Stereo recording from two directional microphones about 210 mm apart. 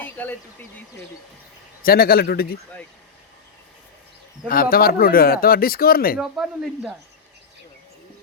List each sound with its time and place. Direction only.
0.0 s a sound: 10° left (ahead or behind)
1.8 s speech: 45° left (ahead or behind)
4.4 s speech: 45° left (ahead or behind)
6.1 s speech: centre (ahead or behind)